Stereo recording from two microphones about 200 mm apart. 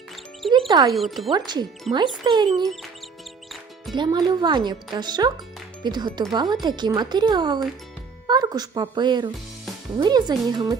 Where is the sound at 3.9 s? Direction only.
20° right (ahead or behind).